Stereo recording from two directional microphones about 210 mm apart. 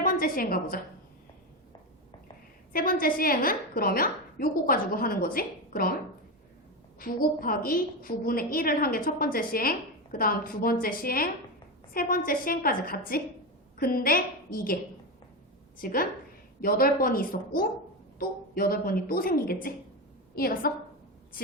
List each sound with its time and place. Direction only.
0.0 s a woman's voice: 40° left (ahead or behind)
2.7 s a woman's voice: 40° left (ahead or behind)
7.0 s a woman's voice: 45° left (ahead or behind)
15.8 s a woman's voice: 45° left (ahead or behind)